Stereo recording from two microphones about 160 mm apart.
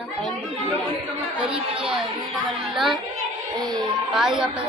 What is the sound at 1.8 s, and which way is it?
Speech, 5° right (ahead or behind).